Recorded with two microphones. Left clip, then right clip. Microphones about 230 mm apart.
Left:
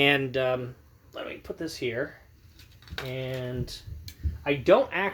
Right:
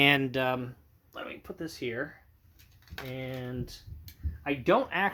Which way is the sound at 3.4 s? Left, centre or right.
Right.